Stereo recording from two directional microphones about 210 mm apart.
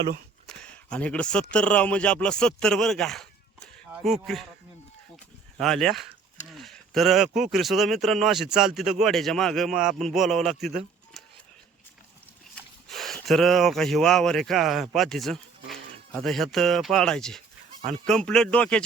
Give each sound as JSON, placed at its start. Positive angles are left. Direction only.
{"t": 0.4, "sound": "speech", "side_deg": 5}
{"t": 5.5, "sound": "speech", "side_deg": 0}
{"t": 12.9, "sound": "a sound", "side_deg": 0}
{"t": 13.2, "sound": "speech", "side_deg": 0}